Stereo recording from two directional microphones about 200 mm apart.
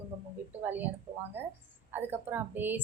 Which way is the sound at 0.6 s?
10° right (ahead or behind).